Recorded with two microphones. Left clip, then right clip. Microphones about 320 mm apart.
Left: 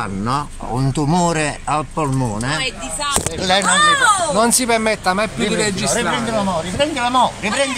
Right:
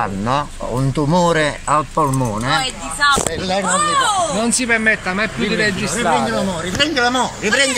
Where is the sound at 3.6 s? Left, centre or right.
Left.